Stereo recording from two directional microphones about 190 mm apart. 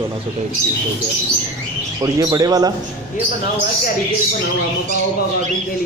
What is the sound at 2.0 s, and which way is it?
Speech, 20° right (ahead or behind).